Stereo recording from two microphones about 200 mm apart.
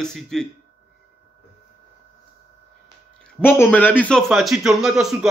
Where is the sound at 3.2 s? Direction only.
5° left (ahead or behind).